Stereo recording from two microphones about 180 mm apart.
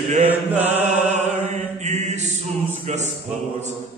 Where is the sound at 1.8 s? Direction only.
40° right (ahead or behind).